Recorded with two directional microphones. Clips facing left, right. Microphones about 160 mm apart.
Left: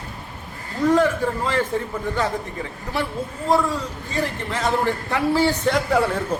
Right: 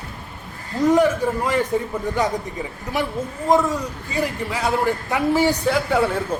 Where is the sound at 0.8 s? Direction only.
15° right (ahead or behind).